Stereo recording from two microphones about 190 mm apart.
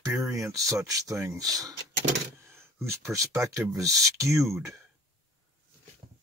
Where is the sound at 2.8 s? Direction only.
15° right (ahead or behind).